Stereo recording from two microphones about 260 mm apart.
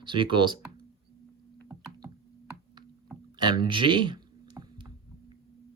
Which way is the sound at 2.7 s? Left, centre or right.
Centre.